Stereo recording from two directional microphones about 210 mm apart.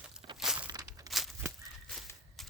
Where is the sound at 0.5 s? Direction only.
20° right (ahead or behind).